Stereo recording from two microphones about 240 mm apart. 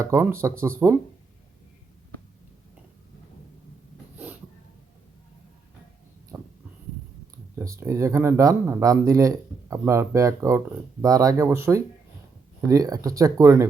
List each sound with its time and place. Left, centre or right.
0.0 s speech: centre
7.6 s speech: centre